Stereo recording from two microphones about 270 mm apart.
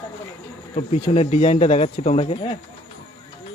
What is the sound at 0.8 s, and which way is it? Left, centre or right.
Speech, left.